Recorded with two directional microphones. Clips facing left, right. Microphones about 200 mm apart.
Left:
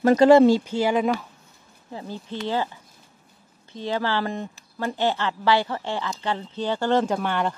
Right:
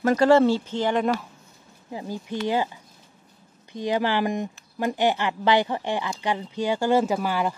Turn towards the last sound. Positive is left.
turn(degrees=-5)  # may be behind; listen again after turning